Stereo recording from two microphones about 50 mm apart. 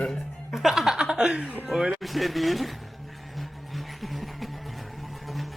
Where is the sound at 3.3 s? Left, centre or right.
Centre.